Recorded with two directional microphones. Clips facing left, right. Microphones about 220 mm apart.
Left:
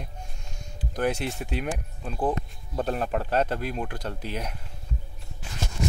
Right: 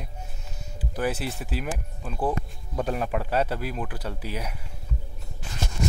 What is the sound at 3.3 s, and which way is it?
Speech, 10° right (ahead or behind).